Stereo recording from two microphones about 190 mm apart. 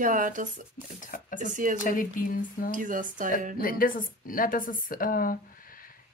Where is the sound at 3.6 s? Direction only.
45° left (ahead or behind).